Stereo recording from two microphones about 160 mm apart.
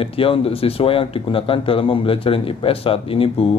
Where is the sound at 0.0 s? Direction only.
35° left (ahead or behind).